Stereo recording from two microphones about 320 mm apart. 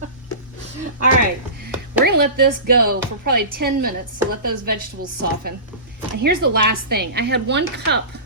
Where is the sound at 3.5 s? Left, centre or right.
Right.